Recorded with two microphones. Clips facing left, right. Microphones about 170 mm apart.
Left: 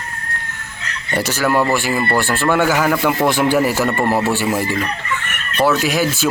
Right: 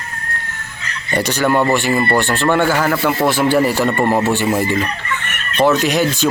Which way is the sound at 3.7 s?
5° left (ahead or behind).